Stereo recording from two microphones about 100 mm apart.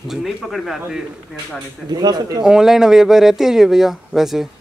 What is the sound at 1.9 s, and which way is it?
Speech, 40° right (ahead or behind).